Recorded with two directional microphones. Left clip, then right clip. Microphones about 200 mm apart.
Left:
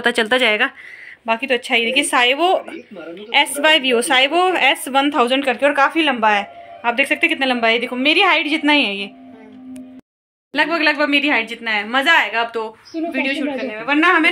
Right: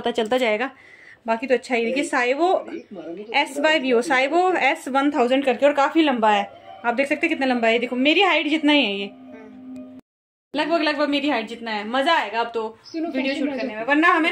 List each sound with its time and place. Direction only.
0.0 s a woman's voice: 5° left (ahead or behind)
10.5 s a woman's voice: 5° left (ahead or behind)